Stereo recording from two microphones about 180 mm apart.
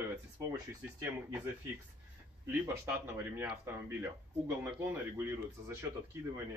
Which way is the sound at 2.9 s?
10° right (ahead or behind).